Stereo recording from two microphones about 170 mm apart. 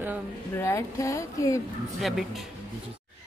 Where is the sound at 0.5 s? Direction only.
15° left (ahead or behind).